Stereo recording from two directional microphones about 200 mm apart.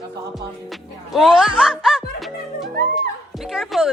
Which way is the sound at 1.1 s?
Centre (ahead or behind).